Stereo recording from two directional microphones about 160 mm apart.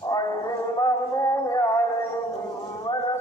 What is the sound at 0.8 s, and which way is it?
Music, 20° left (ahead or behind).